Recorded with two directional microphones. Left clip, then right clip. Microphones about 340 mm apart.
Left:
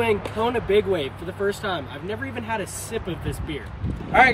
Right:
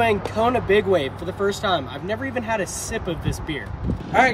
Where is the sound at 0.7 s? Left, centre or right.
Right.